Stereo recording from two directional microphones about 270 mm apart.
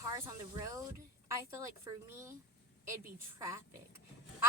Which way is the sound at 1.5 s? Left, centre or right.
Centre.